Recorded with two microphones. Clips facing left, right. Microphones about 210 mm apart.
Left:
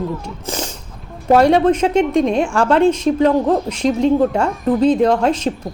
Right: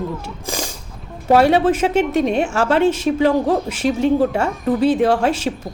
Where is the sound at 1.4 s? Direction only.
5° right (ahead or behind).